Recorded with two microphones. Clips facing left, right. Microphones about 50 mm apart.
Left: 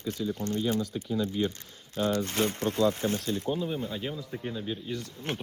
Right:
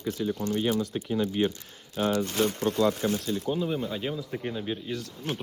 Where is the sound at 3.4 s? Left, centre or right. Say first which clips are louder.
Right 4 dB; right.